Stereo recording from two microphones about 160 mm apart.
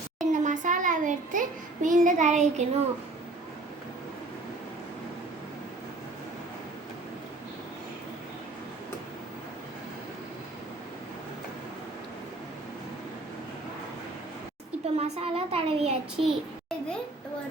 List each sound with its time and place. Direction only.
0.3 s a child's voice: 50° right (ahead or behind)
14.9 s a child's voice: 40° right (ahead or behind)
16.2 s a sound: 5° left (ahead or behind)